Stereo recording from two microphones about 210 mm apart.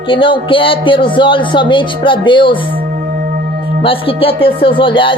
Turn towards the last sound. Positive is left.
turn(degrees=25)  # may be behind; listen again after turning